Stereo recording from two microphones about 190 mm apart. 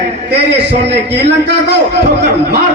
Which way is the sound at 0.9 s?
60° right (ahead or behind).